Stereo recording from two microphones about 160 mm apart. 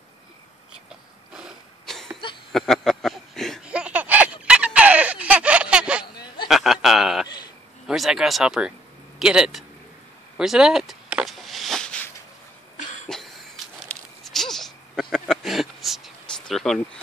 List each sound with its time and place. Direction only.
0.8 s cough: 5° right (ahead or behind)
2.5 s a sound: centre (ahead or behind)
6.4 s chuckle: centre (ahead or behind)
7.8 s speech: centre (ahead or behind)
10.3 s vehicle: 5° right (ahead or behind)
12.7 s cough: 50° left (ahead or behind)
13.8 s a sound: centre (ahead or behind)